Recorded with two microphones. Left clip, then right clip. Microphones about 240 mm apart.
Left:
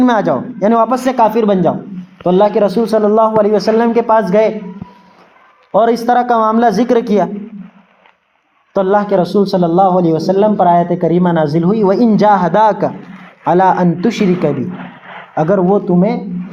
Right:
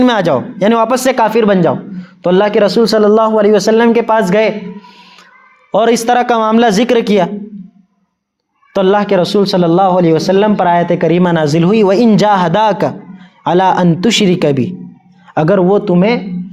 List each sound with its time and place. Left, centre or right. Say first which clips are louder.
0.0 s a man's voice: right 1 dB; right
5.7 s a man's voice: right 1 dB; right
6.5 s speech: right 1 dB; right
8.7 s a man's voice: right 1 dB; right